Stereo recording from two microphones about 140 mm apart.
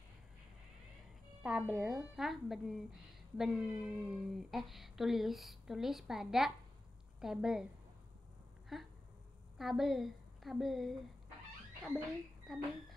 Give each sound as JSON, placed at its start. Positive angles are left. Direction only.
{"t": 1.4, "sound": "speech", "side_deg": -5}
{"t": 8.7, "sound": "a woman's voice", "side_deg": 0}
{"t": 12.5, "sound": "speech", "side_deg": 0}